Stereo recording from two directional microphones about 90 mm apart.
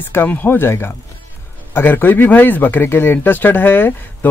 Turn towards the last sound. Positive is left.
turn(degrees=20)  # may be behind; listen again after turning